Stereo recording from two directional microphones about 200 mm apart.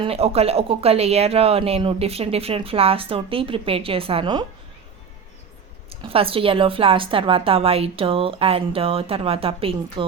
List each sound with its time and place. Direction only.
0.0 s speech: 30° right (ahead or behind)
6.0 s speech: 30° right (ahead or behind)